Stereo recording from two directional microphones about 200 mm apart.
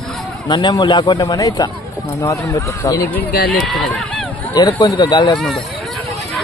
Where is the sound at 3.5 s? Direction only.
Centre (ahead or behind).